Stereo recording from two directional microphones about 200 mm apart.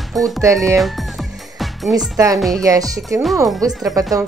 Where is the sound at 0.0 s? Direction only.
Centre (ahead or behind).